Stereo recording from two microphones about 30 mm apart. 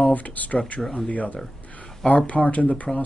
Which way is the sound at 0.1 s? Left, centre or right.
Left.